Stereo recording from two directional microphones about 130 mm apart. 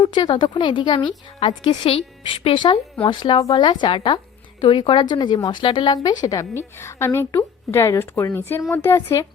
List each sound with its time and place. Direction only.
0.0 s a woman's voice: 35° left (ahead or behind)